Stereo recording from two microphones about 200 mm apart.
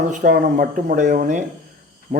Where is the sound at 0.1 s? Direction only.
40° right (ahead or behind).